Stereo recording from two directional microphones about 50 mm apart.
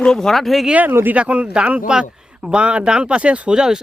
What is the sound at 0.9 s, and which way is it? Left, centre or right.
Speech, right.